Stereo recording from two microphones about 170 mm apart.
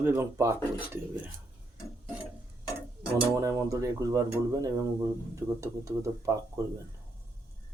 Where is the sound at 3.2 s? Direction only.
20° right (ahead or behind).